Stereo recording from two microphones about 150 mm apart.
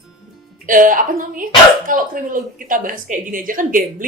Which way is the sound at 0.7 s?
65° right (ahead or behind).